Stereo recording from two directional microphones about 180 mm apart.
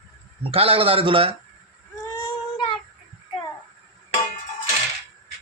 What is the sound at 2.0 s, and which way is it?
Child singing, 25° left (ahead or behind).